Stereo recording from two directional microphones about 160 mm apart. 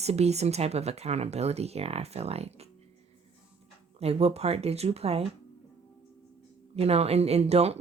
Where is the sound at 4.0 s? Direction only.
40° right (ahead or behind).